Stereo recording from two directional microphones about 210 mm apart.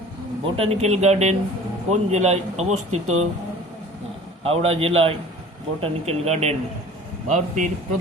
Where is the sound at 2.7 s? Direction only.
90° right.